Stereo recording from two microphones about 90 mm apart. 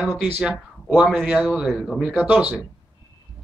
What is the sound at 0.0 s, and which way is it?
A man's voice, 5° right (ahead or behind).